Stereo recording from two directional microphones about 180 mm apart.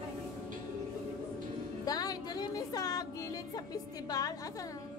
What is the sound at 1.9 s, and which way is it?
Music, 20° left (ahead or behind).